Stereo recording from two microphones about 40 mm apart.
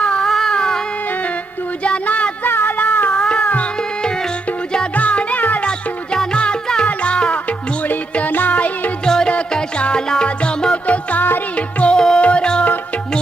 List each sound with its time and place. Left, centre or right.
0.0 s a sound: left
0.3 s a sound: centre
0.5 s music: centre
2.0 s a sound: left
2.5 s music: left
2.7 s music: left
3.2 s cat: left
4.9 s music: left
6.3 s music: left
8.3 s music: left
9.0 s music: centre
10.8 s music: left
11.9 s music: centre